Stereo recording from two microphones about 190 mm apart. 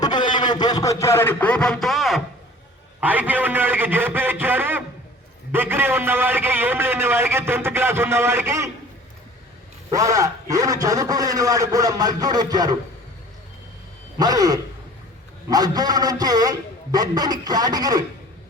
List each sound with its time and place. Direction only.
0.0 s a man's voice: 25° left (ahead or behind); by 8.7 s 15° right (ahead or behind)
9.9 s a man's voice: 15° right (ahead or behind)
14.2 s a man's voice: 20° right (ahead or behind)